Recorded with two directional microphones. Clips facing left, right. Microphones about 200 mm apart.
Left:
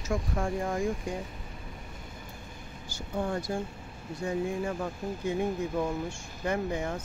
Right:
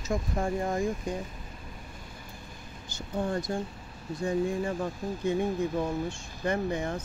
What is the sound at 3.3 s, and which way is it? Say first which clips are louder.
Speech: right 1 dB; 10° left (ahead or behind).